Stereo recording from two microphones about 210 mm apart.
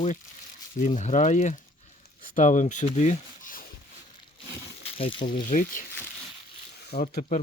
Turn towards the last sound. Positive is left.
turn(degrees=45)  # may be behind; listen again after turning